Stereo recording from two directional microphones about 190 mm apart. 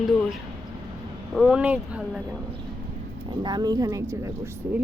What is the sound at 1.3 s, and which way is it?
Speech, centre (ahead or behind).